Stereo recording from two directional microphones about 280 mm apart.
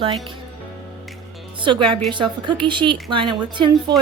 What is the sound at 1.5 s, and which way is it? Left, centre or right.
A woman's voice, centre.